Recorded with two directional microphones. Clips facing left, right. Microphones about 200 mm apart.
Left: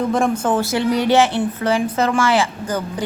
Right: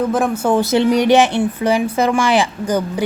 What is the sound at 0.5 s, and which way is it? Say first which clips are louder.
A woman's voice: right 4 dB; 20° right (ahead or behind).